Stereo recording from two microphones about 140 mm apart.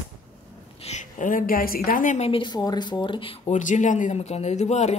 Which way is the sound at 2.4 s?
30° left (ahead or behind).